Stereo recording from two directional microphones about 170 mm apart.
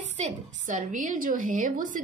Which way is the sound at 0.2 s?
50° right (ahead or behind).